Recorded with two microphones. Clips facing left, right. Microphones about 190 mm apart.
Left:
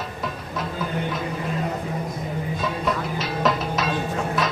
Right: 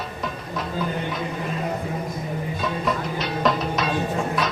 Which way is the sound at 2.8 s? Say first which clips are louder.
Even; centre (ahead or behind).